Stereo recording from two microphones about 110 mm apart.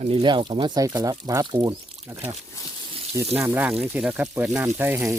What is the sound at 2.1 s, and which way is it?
Speech, 20° right (ahead or behind).